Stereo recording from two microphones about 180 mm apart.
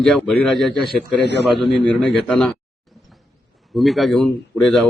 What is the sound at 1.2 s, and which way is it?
Speech, 70° left (ahead or behind).